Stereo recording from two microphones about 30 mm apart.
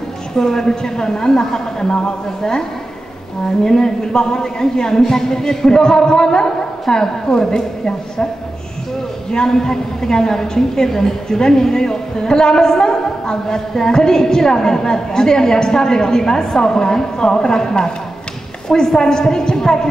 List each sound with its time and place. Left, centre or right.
0.4 s a woman's voice: centre
3.6 s a woman's voice: left
9.5 s a woman's voice: centre